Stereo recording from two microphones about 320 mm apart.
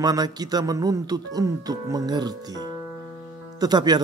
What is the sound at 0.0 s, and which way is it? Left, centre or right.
Speech, centre.